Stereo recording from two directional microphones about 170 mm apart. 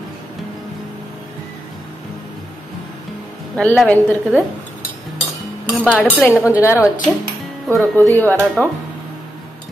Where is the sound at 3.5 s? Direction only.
5° left (ahead or behind).